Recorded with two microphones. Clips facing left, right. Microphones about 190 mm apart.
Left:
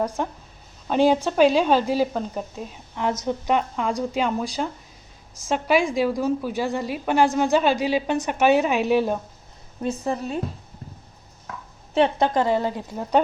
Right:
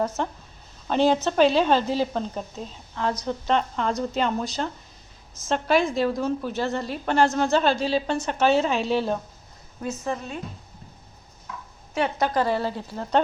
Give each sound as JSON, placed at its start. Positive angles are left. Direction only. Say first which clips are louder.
{"t": 0.0, "sound": "speech", "louder": "left 1 dB", "side_deg": 10}
{"t": 9.8, "sound": "a woman's voice", "louder": "left 4 dB", "side_deg": 30}
{"t": 12.2, "sound": "speech", "louder": "left 3 dB", "side_deg": 20}